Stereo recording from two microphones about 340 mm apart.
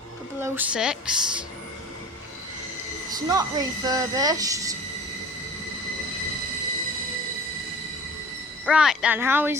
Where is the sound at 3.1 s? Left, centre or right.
Centre.